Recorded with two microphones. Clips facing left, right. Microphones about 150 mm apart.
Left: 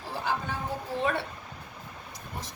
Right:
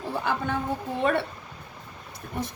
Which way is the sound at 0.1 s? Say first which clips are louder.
Right 4 dB; 60° right (ahead or behind).